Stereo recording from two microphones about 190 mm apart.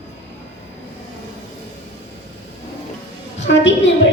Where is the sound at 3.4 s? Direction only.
75° left (ahead or behind).